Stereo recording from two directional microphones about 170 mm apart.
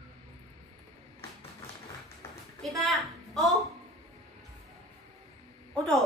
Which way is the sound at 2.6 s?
Centre (ahead or behind).